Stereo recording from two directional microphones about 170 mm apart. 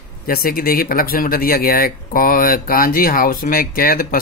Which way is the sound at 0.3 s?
60° left (ahead or behind).